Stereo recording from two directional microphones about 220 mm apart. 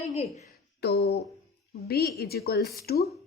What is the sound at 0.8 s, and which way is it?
A woman's voice, 45° left (ahead or behind).